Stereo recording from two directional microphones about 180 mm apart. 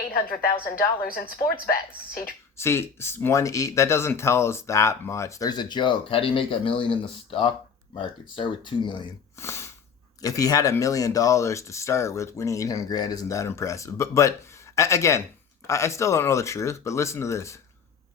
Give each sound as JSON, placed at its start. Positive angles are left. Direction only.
{"t": 0.6, "sound": "a woman's voice", "side_deg": 55}
{"t": 2.6, "sound": "speech", "side_deg": 15}
{"t": 9.4, "sound": "snort", "side_deg": 15}
{"t": 10.2, "sound": "speech", "side_deg": 20}